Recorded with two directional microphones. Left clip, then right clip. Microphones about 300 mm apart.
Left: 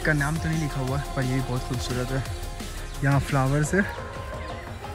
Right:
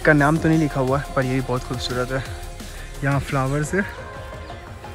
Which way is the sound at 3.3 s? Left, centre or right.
Left.